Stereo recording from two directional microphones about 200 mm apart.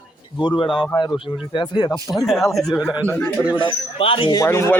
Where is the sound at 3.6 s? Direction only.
25° left (ahead or behind).